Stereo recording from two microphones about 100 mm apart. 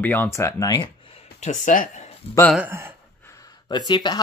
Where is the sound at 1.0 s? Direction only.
80° left.